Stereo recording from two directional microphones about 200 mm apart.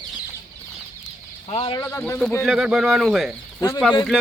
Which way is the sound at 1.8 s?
10° left (ahead or behind).